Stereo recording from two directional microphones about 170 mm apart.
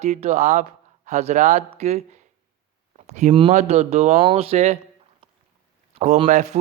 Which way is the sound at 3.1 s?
45° right (ahead or behind).